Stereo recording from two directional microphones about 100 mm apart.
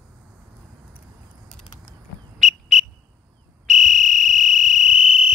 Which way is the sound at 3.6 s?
Centre (ahead or behind).